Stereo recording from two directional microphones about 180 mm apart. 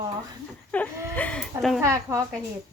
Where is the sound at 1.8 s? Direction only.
15° right (ahead or behind).